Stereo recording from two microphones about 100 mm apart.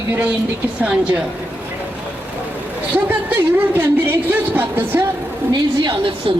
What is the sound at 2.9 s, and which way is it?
Speech, 20° right (ahead or behind).